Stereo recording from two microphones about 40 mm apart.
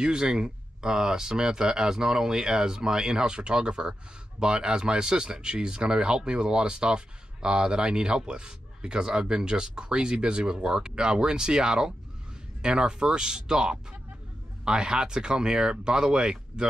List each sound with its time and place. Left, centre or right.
0.0 s speech: right